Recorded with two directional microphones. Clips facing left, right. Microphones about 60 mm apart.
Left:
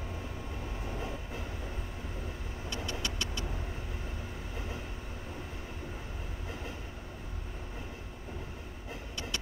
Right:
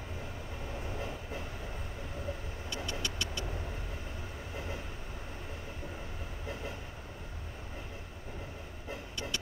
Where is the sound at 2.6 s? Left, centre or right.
Left.